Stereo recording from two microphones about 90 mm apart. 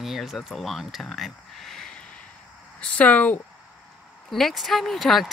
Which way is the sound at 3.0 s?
15° left (ahead or behind).